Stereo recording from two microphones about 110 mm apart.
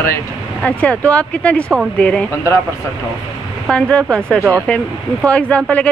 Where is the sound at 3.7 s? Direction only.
10° left (ahead or behind).